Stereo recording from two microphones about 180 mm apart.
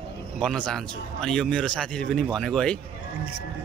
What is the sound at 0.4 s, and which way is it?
A man's voice, 5° left (ahead or behind).